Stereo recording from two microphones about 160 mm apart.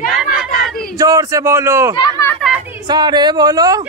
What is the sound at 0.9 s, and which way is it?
A man's voice, 20° right (ahead or behind).